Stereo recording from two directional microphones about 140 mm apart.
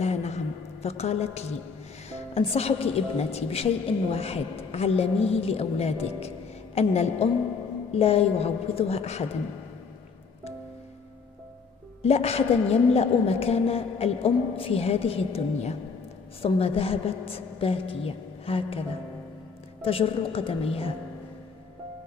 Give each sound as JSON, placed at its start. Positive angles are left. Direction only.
{"t": 0.0, "sound": "a sound", "side_deg": 50}
{"t": 0.8, "sound": "a woman's voice", "side_deg": 50}
{"t": 12.0, "sound": "a woman's voice", "side_deg": 45}